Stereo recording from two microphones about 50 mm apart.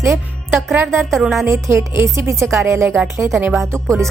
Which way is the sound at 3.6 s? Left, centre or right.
Right.